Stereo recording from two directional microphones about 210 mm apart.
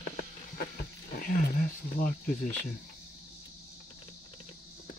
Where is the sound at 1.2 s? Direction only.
40° left (ahead or behind).